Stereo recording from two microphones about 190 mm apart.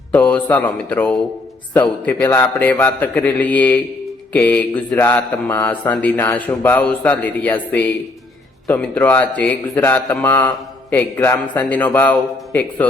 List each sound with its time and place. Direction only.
0.1 s speech: 10° left (ahead or behind)